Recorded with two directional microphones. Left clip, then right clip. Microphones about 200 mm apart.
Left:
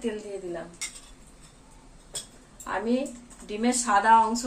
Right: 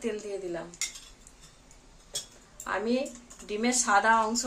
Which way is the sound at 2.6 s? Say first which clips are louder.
Left 1 dB; 20° right (ahead or behind).